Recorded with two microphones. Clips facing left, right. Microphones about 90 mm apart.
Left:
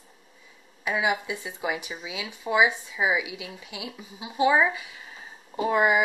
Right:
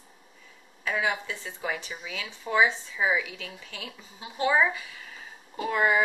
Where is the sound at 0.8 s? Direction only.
15° left (ahead or behind).